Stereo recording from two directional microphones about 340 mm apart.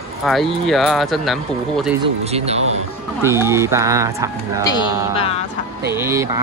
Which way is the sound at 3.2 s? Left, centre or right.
Centre.